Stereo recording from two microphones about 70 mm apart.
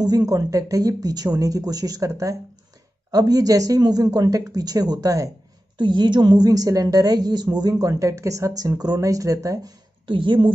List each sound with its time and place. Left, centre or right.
0.0 s speech: right
3.1 s speech: right
5.9 s a woman's voice: right
7.8 s speech: right